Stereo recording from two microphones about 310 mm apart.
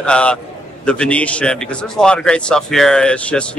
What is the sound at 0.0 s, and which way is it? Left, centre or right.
A man's voice, centre.